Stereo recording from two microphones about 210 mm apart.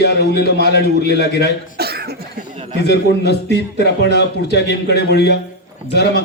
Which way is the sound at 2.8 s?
50° left (ahead or behind).